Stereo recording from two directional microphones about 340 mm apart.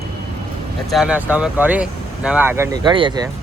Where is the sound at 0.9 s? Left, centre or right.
Centre.